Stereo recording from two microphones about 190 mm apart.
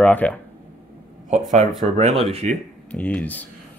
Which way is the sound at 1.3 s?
40° right (ahead or behind).